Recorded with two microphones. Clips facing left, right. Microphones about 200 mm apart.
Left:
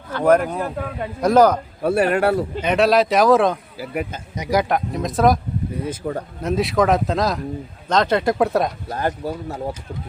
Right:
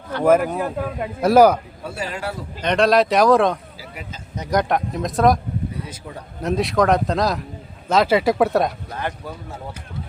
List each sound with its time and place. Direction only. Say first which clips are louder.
0.1 s a man's voice: even; 5° right (ahead or behind)
1.8 s a man's voice: left 11 dB; 60° left (ahead or behind)
2.6 s speech: right 2 dB; 5° left (ahead or behind)
3.8 s a man's voice: left 10 dB; 55° left (ahead or behind)
4.4 s speech: left 1 dB; 10° left (ahead or behind)
5.8 s speech: left 10 dB; 50° left (ahead or behind)
6.4 s speech: even; centre (ahead or behind)
8.9 s speech: left 5 dB; 40° left (ahead or behind)